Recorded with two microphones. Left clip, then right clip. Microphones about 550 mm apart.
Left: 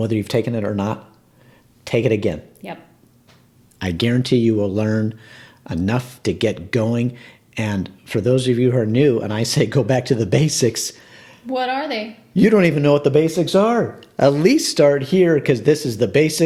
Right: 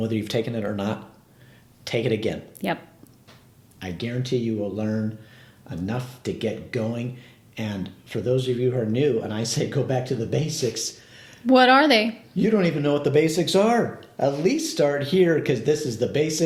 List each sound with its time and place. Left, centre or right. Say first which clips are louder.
0.0 s speech: left 5 dB; left
2.6 s a woman's voice: right 7 dB; right
3.8 s speech: left 10 dB; left
11.4 s a woman's voice: right 6 dB; right
12.4 s speech: left 7 dB; left
14.2 s speech: left 8 dB; left